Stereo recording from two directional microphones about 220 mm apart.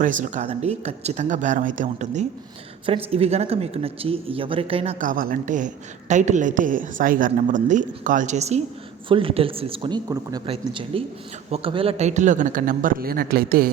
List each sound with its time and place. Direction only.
0.0 s speech: 35° right (ahead or behind)